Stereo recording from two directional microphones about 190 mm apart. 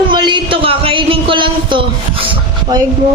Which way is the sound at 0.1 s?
25° right (ahead or behind).